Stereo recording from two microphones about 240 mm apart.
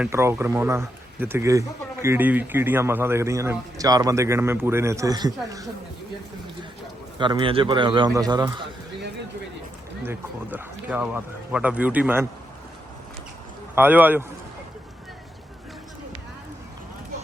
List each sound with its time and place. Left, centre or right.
0.0 s speech: centre
7.2 s a man's voice: centre
10.0 s speech: centre
13.7 s speech: centre